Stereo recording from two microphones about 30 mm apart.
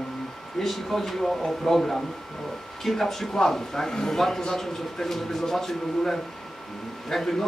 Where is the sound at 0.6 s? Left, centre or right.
Centre.